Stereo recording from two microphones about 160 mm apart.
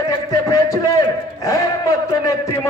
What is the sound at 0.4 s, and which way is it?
Speech, 20° left (ahead or behind).